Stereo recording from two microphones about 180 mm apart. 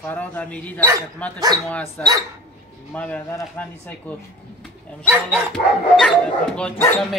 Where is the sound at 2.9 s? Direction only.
10° left (ahead or behind).